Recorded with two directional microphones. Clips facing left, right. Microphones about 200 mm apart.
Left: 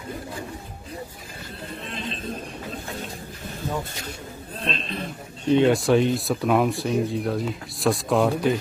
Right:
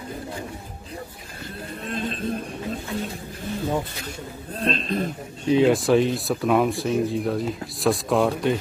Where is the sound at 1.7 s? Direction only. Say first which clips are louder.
Right 5 dB; 45° right (ahead or behind).